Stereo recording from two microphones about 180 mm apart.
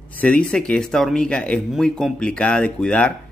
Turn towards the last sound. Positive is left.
turn(degrees=5)  # may be behind; listen again after turning